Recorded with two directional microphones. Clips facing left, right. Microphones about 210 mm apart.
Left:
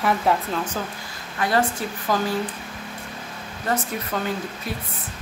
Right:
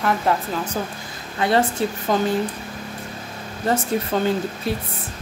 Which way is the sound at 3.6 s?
25° right (ahead or behind).